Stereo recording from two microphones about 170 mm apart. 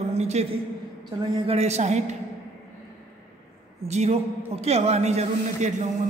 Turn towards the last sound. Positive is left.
turn(degrees=-40)  # may be behind; listen again after turning